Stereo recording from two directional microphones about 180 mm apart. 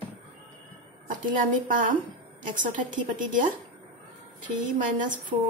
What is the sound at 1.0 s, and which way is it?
A woman's voice, 45° right (ahead or behind).